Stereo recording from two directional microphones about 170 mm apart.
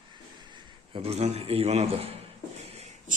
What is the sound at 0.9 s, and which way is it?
A man's voice, 35° right (ahead or behind).